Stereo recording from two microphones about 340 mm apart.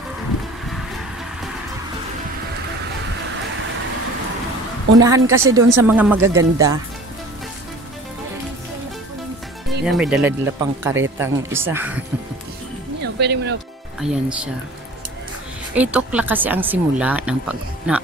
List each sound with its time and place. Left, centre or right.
4.9 s speech: centre
9.8 s speech: centre
13.0 s speech: right
14.0 s speech: centre
15.7 s speech: centre